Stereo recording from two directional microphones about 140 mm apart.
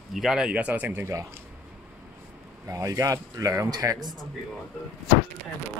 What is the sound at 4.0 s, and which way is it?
Speech, centre (ahead or behind).